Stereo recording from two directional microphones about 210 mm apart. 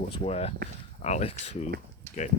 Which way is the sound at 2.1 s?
15° left (ahead or behind).